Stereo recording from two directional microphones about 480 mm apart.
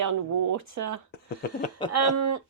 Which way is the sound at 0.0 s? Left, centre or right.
Right.